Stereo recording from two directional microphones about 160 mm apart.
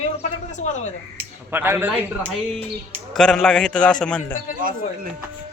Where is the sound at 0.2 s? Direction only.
50° left (ahead or behind).